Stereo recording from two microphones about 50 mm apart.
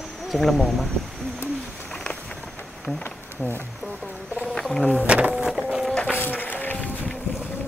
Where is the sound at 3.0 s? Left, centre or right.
Left.